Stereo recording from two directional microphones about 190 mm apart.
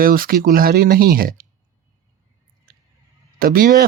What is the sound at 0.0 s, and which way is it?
Speech, 50° right (ahead or behind).